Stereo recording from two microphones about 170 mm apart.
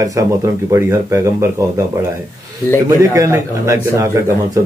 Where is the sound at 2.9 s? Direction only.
20° right (ahead or behind).